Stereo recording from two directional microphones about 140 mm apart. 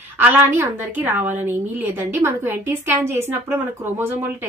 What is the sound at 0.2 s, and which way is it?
A woman's voice, 15° right (ahead or behind).